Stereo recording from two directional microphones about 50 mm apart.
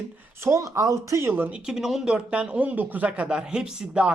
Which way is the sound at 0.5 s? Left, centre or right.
Right.